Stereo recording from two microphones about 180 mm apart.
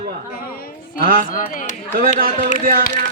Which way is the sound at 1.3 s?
50° left (ahead or behind).